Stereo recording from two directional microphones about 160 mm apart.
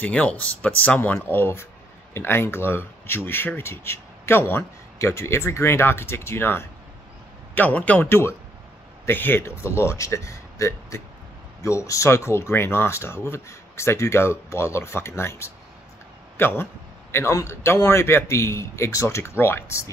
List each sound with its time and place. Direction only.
0.0 s speech: 10° left (ahead or behind)